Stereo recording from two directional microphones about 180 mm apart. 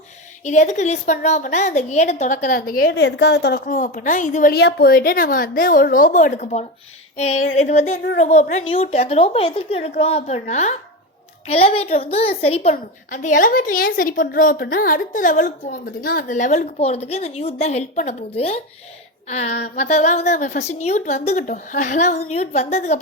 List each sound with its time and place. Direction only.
0.4 s a woman's voice: 40° left (ahead or behind); by 3.6 s 70° left (ahead or behind)
3.7 s a woman's voice: 45° left (ahead or behind)
4.5 s a woman's voice: 60° left (ahead or behind); by 18.6 s 35° left (ahead or behind)
19.5 s a sound: 65° left (ahead or behind)
19.7 s a woman's voice: 40° left (ahead or behind)